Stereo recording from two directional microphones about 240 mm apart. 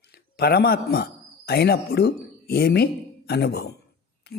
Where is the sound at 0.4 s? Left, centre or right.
Left.